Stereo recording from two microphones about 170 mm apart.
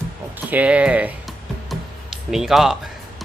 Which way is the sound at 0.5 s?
5° right (ahead or behind).